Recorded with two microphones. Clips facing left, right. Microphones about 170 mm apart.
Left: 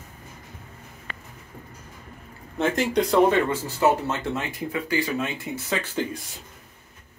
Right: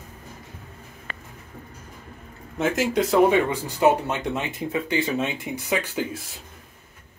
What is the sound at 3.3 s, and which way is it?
Speech, 15° right (ahead or behind).